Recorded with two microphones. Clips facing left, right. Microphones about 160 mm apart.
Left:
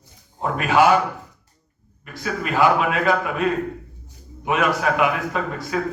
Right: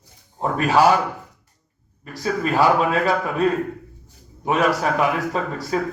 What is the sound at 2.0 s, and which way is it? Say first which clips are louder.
A man's voice: right 4 dB; 35° right (ahead or behind).